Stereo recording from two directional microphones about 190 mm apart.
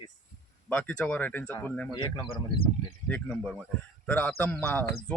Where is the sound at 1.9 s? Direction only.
25° left (ahead or behind).